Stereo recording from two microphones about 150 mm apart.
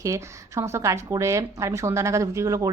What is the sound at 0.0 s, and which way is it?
A woman's voice, 20° right (ahead or behind).